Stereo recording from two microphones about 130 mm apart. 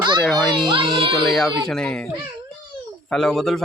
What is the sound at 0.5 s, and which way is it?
Speech, 40° right (ahead or behind).